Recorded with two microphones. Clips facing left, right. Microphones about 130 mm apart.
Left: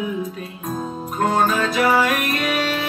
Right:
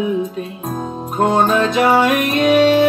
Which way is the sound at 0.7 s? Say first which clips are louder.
Right 5 dB; 25° right (ahead or behind).